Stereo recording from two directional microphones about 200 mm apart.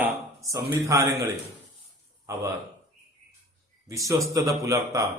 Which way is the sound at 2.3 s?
15° right (ahead or behind).